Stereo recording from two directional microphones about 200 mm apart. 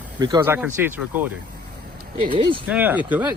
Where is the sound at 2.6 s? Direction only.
5° right (ahead or behind).